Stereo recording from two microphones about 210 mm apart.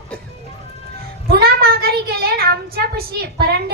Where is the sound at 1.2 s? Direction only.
45° right (ahead or behind).